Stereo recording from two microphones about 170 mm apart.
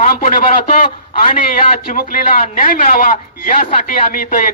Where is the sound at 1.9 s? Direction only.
55° left (ahead or behind).